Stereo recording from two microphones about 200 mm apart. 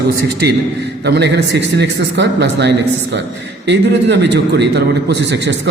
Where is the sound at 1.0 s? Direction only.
55° right (ahead or behind).